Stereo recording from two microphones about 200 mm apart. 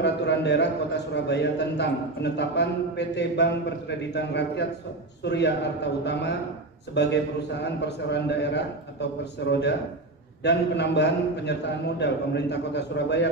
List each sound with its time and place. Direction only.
0.0 s a man's voice: 60° left (ahead or behind)